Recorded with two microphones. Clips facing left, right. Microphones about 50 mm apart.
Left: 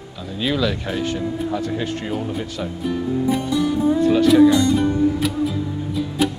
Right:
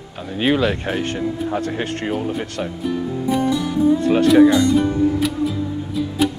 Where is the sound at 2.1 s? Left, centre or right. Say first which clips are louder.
Right 2 dB; centre.